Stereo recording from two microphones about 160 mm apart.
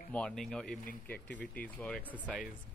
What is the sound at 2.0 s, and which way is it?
Speech, 10° right (ahead or behind).